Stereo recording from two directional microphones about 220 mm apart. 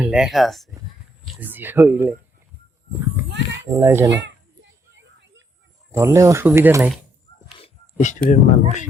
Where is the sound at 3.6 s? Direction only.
10° right (ahead or behind).